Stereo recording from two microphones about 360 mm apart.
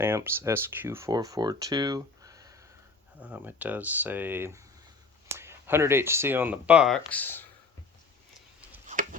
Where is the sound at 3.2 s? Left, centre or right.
Centre.